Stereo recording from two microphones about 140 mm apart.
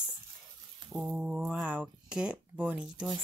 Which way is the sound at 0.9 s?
5° right (ahead or behind).